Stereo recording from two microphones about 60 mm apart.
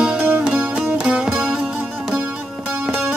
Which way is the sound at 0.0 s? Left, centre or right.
Centre.